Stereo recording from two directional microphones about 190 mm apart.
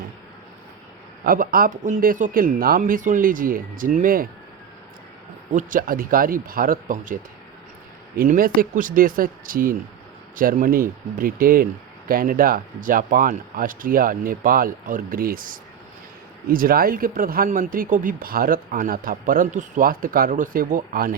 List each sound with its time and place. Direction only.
1.2 s speech: 50° right (ahead or behind)
5.5 s speech: 45° right (ahead or behind)